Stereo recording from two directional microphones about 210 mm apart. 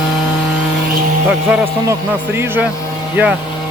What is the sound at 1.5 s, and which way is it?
Speech, 10° right (ahead or behind).